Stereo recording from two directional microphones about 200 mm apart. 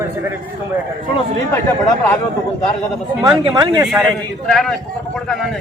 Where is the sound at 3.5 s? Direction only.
15° right (ahead or behind).